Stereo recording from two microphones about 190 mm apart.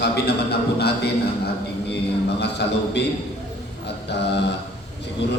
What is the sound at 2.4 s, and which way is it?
Speech, 60° left (ahead or behind).